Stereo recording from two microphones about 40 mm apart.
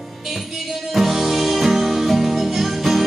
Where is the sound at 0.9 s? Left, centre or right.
Centre.